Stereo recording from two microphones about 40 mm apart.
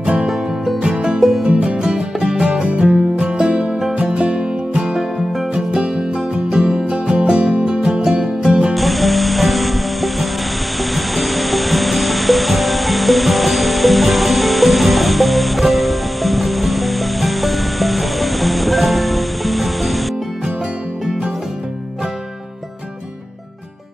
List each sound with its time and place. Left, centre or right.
0.0 s music: right
1.5 s music: right
1.8 s music: right
8.7 s music: centre